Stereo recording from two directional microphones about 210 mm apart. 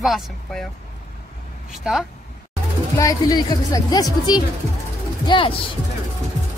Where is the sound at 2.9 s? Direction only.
15° left (ahead or behind).